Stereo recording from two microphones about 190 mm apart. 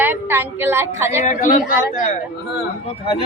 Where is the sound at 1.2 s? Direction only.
40° left (ahead or behind).